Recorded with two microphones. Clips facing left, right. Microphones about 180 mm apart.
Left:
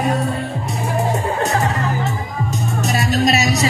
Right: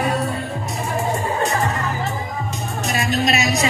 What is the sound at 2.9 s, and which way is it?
Music, 40° left (ahead or behind).